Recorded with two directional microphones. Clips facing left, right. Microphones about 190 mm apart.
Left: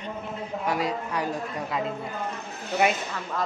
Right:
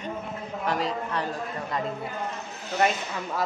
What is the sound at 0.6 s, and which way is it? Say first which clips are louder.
A woman's voice: even; 10° left (ahead or behind).